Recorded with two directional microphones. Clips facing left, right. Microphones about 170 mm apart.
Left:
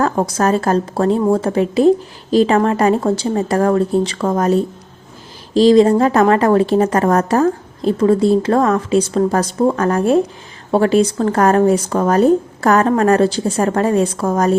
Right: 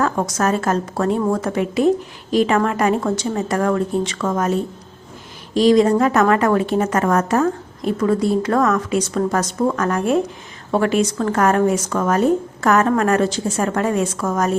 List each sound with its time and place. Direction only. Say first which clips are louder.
0.0 s a woman's voice: left 3 dB; 30° left (ahead or behind)